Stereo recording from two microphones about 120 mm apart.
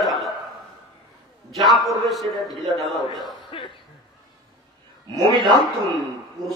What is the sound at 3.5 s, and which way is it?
Cough, 45° left (ahead or behind).